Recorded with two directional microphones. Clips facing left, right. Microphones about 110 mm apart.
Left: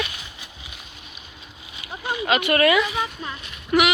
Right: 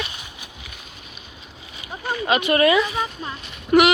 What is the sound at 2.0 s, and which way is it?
Speech, 10° left (ahead or behind).